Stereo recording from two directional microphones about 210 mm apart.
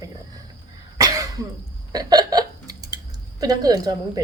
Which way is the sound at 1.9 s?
20° right (ahead or behind).